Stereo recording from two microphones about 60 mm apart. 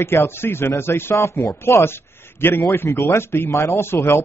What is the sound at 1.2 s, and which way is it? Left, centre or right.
A man's voice, left.